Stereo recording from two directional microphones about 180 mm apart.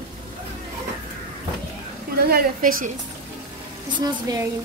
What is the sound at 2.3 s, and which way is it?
Speech, 50° right (ahead or behind).